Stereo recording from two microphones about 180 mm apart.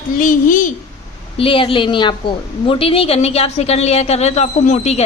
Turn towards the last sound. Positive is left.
turn(degrees=40)  # may be behind; listen again after turning